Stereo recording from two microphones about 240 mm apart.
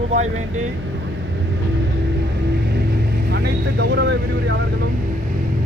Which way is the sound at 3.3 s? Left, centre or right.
Right.